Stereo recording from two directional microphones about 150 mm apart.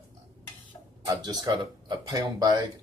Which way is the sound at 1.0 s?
25° right (ahead or behind).